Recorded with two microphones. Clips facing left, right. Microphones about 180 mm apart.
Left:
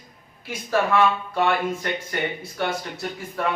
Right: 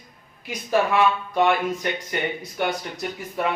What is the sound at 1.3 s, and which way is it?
Speech, 15° right (ahead or behind).